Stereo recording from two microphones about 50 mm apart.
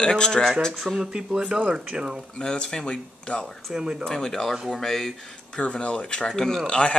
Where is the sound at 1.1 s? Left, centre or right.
Centre.